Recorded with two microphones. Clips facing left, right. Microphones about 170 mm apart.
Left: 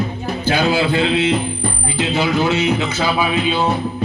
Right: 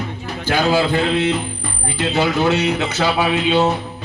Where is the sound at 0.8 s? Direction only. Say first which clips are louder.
Left 1 dB; 45° right (ahead or behind).